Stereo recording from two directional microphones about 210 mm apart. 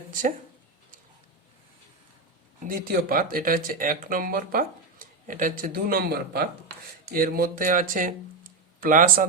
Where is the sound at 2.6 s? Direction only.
40° right (ahead or behind).